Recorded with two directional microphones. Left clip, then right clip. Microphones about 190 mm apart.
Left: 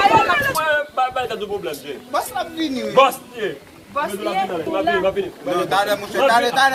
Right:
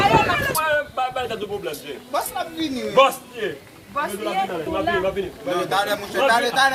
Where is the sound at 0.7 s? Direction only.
10° right (ahead or behind).